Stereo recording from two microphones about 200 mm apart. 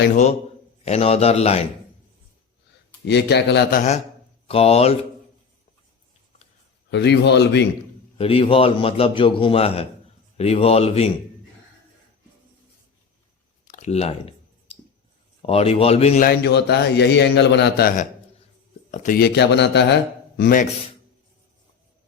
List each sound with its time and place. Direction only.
0.1 s speech: 35° left (ahead or behind)
3.1 s a man's voice: 55° left (ahead or behind)
3.8 s a man's voice: 35° left (ahead or behind)
6.9 s a man's voice: 60° left (ahead or behind)
8.2 s a man's voice: 30° left (ahead or behind)
13.7 s clicking: 35° left (ahead or behind)
15.4 s speech: 30° left (ahead or behind)
16.2 s a man's voice: 55° left (ahead or behind)
18.9 s speech: 35° left (ahead or behind)
19.2 s a man's voice: 60° left (ahead or behind)